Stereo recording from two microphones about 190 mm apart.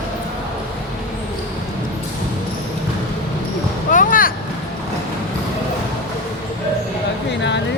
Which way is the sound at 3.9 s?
45° left (ahead or behind).